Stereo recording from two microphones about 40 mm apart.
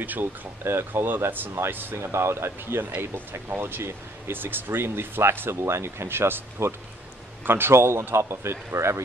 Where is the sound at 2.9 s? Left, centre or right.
Right.